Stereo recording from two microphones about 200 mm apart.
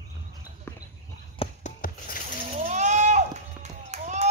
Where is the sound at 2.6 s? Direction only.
35° right (ahead or behind).